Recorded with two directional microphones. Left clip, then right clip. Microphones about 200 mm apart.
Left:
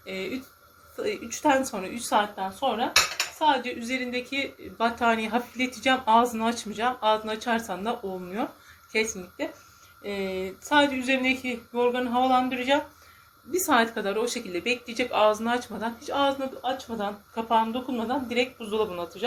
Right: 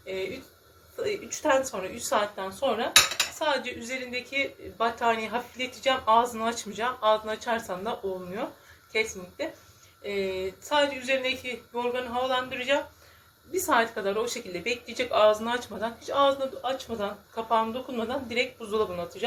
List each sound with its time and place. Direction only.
0.0 s a sound: 20° left (ahead or behind)
1.0 s a woman's voice: 25° left (ahead or behind)
13.5 s speech: 20° left (ahead or behind)